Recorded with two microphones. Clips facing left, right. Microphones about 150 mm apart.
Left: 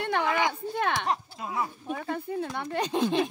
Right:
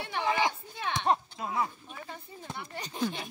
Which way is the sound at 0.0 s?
60° left (ahead or behind).